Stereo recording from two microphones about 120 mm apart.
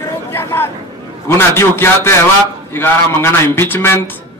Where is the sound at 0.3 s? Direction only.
20° left (ahead or behind).